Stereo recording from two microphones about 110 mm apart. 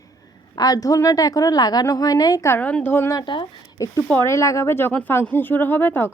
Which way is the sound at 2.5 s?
15° left (ahead or behind).